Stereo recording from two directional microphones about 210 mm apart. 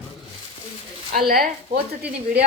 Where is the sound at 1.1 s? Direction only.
45° right (ahead or behind).